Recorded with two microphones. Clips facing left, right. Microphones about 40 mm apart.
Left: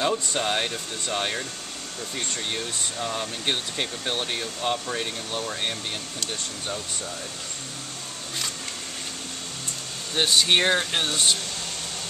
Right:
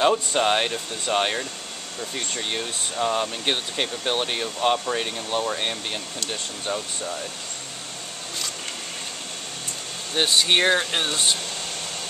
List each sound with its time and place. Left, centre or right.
0.0 s speech: right
2.1 s speech: centre
10.1 s speech: centre